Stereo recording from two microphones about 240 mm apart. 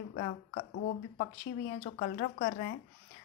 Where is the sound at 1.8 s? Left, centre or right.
Left.